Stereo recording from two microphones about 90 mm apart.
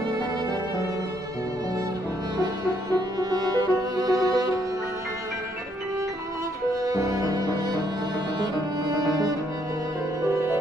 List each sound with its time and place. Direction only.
2.3 s music: 50° right (ahead or behind)
6.7 s music: 40° right (ahead or behind)
10.2 s music: 30° right (ahead or behind)